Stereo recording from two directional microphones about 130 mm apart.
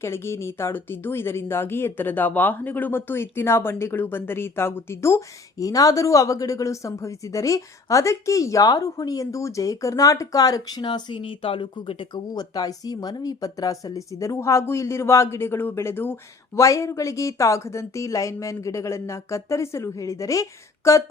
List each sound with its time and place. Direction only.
0.0 s speech: 20° left (ahead or behind)